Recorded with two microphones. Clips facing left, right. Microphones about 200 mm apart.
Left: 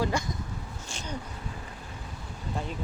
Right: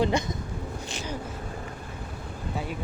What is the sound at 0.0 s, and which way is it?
Speech, 20° right (ahead or behind).